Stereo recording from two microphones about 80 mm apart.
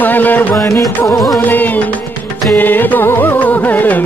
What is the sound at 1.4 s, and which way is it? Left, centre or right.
Music, left.